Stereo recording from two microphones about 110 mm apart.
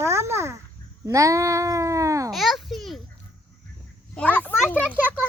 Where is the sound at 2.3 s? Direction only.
Centre (ahead or behind).